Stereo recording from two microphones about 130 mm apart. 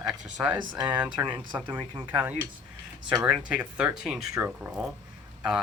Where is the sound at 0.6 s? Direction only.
35° right (ahead or behind).